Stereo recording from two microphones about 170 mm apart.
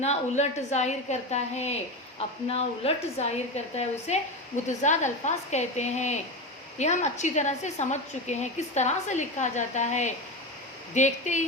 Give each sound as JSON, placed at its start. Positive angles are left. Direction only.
{"t": 0.0, "sound": "a woman's voice", "side_deg": 40}